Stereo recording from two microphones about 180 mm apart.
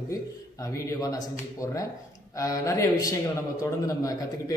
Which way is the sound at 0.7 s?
20° left (ahead or behind).